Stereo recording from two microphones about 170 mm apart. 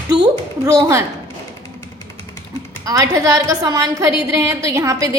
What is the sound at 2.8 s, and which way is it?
A woman's voice, 20° right (ahead or behind).